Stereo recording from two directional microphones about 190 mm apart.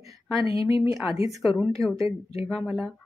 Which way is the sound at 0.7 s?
15° right (ahead or behind).